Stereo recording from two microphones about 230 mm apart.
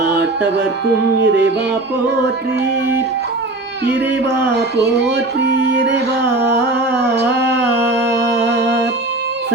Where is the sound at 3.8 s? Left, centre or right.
Right.